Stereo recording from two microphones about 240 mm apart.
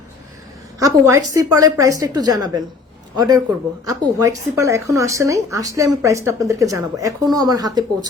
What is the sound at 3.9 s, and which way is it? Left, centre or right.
A woman's voice, centre.